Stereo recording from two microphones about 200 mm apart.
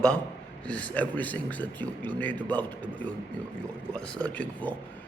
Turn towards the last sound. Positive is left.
turn(degrees=5)  # may be behind; listen again after turning